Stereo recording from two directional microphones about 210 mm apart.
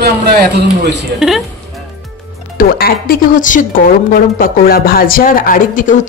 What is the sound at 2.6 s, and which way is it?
Speech, 45° left (ahead or behind).